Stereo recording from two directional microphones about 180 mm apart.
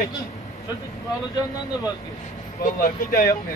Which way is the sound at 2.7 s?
50° left (ahead or behind).